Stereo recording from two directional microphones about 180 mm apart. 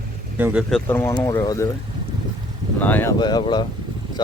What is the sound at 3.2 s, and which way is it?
Speech, 25° left (ahead or behind).